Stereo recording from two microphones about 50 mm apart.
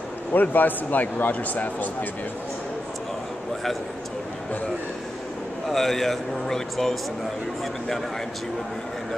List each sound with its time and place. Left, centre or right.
0.3 s speech: left
5.7 s speech: centre